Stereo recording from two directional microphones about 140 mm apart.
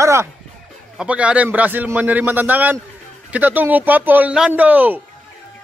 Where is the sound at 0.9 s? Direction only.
10° right (ahead or behind).